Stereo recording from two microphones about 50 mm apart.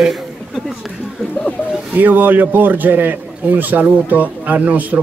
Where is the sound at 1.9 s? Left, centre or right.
Right.